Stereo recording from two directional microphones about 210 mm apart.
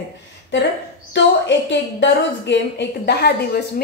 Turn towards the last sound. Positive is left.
turn(degrees=50)  # may be behind; listen again after turning